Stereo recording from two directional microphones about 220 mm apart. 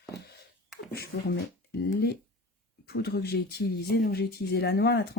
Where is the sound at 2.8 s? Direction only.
45° left (ahead or behind).